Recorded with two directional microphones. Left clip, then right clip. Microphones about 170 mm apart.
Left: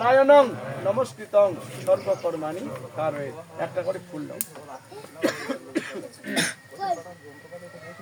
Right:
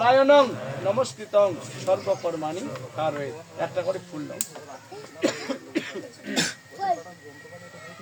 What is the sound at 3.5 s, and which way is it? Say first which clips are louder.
Speech: right 1 dB; 5° right (ahead or behind).